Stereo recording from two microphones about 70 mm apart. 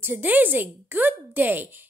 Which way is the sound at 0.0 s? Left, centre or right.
Right.